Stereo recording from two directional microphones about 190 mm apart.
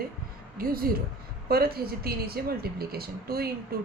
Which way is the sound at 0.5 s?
50° right (ahead or behind).